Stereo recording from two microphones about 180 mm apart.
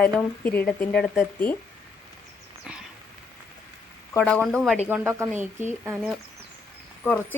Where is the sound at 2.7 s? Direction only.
5° right (ahead or behind).